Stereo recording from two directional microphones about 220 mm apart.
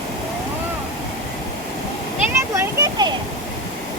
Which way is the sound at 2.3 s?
15° right (ahead or behind).